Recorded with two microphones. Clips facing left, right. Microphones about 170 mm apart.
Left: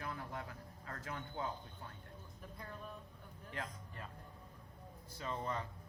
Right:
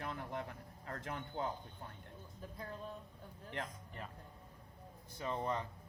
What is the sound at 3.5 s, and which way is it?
Speech, 20° right (ahead or behind).